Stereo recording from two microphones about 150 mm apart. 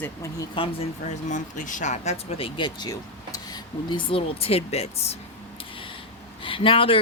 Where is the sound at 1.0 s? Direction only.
55° left (ahead or behind).